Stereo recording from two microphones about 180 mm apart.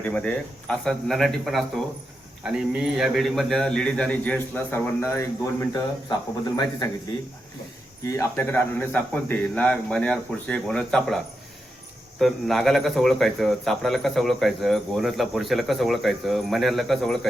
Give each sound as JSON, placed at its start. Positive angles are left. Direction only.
{"t": 0.0, "sound": "a man's voice", "side_deg": 5}
{"t": 8.0, "sound": "speech", "side_deg": 15}
{"t": 12.2, "sound": "speech", "side_deg": 0}